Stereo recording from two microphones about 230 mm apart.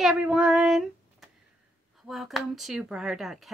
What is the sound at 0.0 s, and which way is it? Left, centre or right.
Speech, centre.